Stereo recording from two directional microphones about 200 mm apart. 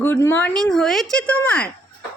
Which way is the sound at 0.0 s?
10° left (ahead or behind).